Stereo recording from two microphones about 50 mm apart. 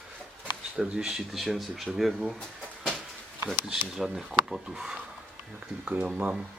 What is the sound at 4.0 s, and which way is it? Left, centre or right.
Speech, centre.